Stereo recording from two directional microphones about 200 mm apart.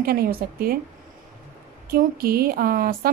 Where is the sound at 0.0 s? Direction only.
50° right (ahead or behind).